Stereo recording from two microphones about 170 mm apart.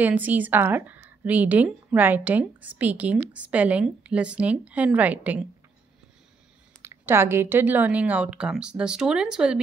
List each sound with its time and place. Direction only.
0.0 s a woman's voice: 10° right (ahead or behind)
6.8 s a woman's voice: 15° right (ahead or behind)